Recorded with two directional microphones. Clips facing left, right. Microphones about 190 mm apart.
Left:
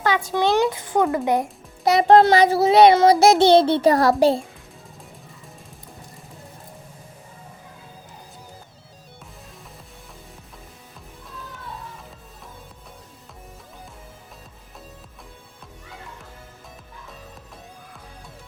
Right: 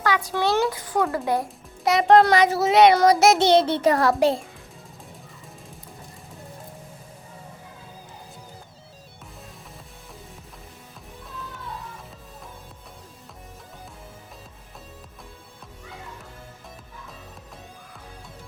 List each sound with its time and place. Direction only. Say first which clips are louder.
0.3 s a child's voice: left 4 dB; 15° left (ahead or behind)
1.8 s a child's voice: left 2 dB; 35° left (ahead or behind)